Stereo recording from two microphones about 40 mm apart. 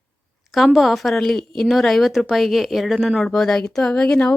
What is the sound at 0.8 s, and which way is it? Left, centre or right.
A woman's voice, centre.